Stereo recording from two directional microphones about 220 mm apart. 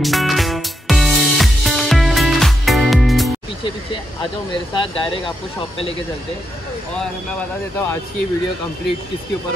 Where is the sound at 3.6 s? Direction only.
20° left (ahead or behind).